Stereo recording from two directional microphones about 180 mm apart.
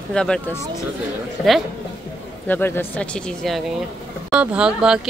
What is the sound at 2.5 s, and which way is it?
Speech, 10° left (ahead or behind).